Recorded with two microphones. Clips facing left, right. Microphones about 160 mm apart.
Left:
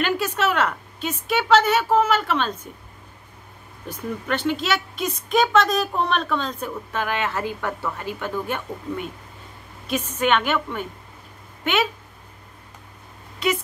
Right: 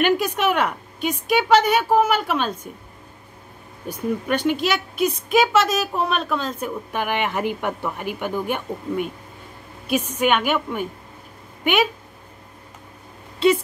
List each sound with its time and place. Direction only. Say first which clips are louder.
0.0 s a woman's voice: right 3 dB; 15° right (ahead or behind)
3.9 s a woman's voice: right 4 dB; 10° right (ahead or behind)
13.4 s speech: right 7 dB; 30° right (ahead or behind)